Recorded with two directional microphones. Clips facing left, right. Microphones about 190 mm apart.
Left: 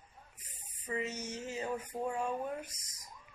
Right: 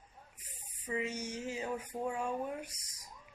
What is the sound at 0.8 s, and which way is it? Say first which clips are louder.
Speech: right 1 dB; 10° right (ahead or behind).